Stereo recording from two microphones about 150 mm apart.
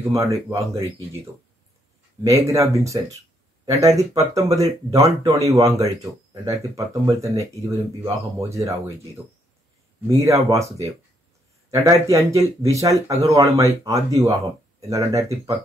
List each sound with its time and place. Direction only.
0.1 s speech: 20° right (ahead or behind)
2.4 s speech: 20° right (ahead or behind)